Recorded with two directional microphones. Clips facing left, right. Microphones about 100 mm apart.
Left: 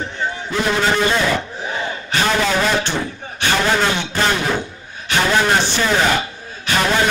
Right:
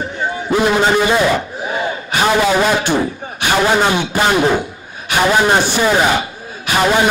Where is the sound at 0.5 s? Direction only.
15° right (ahead or behind).